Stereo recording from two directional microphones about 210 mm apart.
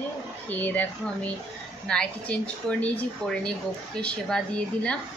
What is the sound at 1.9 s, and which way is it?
Speech, 5° left (ahead or behind).